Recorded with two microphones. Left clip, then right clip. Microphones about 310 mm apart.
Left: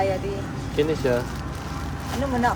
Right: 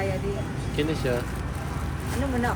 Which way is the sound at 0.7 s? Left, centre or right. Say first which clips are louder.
Left 5 dB; left.